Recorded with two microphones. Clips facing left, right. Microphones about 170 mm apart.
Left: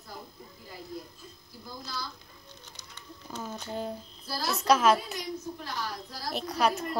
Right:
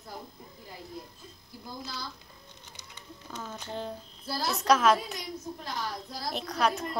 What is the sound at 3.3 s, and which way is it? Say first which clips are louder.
A woman's voice: left 2 dB; 5° left (ahead or behind).